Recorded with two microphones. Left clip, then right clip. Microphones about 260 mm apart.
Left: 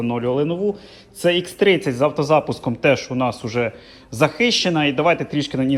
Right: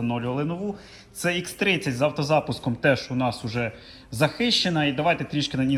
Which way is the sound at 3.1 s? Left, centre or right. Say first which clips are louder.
Left 5 dB; right.